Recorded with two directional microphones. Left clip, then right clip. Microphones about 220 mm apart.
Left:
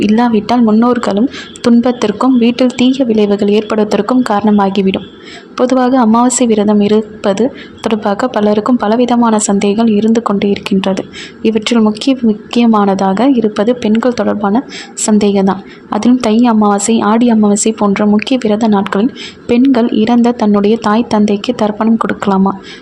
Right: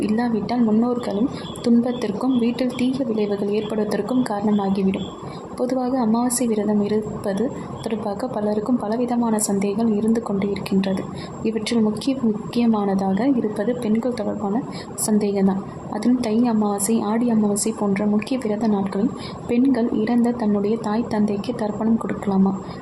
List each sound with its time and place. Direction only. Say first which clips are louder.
0.0 s a woman's voice: left 11 dB; 20° left (ahead or behind)